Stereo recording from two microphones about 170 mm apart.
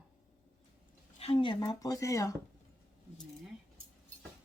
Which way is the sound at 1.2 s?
30° left (ahead or behind).